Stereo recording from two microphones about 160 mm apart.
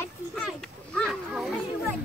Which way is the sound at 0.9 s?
5° left (ahead or behind).